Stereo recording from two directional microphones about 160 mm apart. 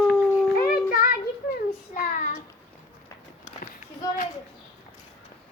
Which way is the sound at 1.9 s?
55° left (ahead or behind).